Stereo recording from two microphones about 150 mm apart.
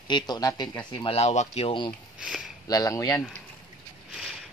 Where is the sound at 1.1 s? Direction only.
45° left (ahead or behind).